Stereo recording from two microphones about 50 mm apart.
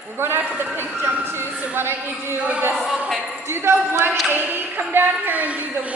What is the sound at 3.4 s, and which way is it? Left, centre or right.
Speech, right.